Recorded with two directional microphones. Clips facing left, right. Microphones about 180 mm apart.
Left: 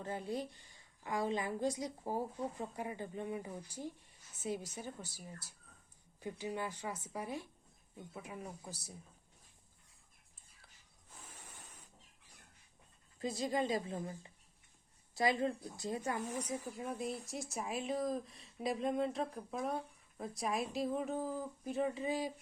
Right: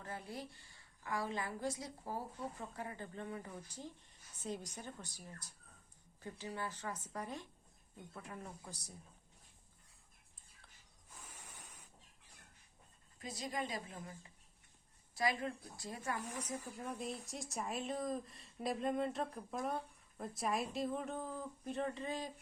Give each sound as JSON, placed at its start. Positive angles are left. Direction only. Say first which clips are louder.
{"t": 0.0, "sound": "a woman's voice", "louder": "left 7 dB", "side_deg": 20}
{"t": 13.1, "sound": "a woman's voice", "louder": "left 7 dB", "side_deg": 25}
{"t": 16.2, "sound": "speech", "louder": "left 4 dB", "side_deg": 10}